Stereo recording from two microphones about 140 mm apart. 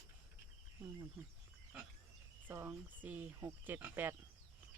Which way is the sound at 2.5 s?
15° right (ahead or behind).